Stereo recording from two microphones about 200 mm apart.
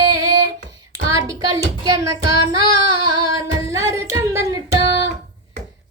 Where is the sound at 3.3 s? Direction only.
15° right (ahead or behind).